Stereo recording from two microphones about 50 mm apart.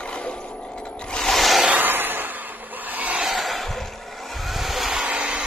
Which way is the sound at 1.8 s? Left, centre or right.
Right.